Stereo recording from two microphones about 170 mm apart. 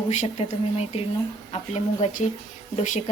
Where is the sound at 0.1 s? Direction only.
45° left (ahead or behind).